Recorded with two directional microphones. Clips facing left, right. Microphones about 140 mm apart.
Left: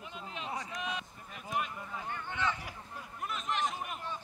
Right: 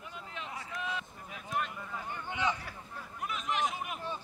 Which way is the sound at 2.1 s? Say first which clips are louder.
Right 2 dB; 15° right (ahead or behind).